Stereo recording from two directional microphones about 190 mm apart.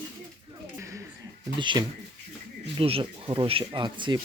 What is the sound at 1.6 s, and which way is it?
Speech, 25° right (ahead or behind).